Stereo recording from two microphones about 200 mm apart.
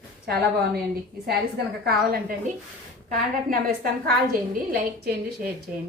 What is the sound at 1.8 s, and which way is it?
A woman's voice, 50° right (ahead or behind).